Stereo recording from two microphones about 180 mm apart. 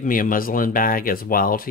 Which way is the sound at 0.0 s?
50° left (ahead or behind).